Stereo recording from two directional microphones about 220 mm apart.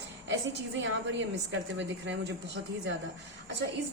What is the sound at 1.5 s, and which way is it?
Speech, 55° right (ahead or behind).